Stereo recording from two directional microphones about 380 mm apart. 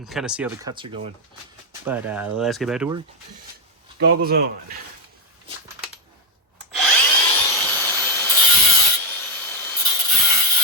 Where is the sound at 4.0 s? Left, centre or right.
Right.